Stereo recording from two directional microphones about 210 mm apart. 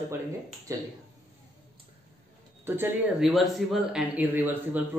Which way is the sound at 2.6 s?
10° right (ahead or behind).